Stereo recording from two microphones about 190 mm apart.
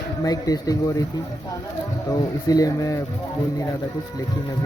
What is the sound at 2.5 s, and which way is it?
Speech, 20° left (ahead or behind).